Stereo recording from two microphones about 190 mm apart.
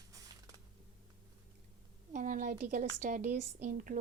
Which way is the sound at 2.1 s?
45° right (ahead or behind).